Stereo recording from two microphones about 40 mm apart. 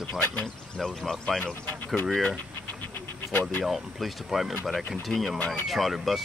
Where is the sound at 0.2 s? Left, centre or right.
Left.